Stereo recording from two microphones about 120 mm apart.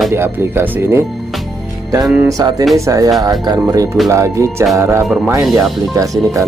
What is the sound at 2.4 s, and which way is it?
Speech, 35° right (ahead or behind).